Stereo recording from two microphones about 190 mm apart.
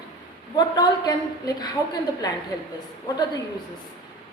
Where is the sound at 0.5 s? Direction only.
20° left (ahead or behind).